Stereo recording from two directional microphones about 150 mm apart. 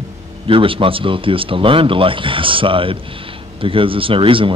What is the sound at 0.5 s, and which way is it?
Speech, 35° right (ahead or behind).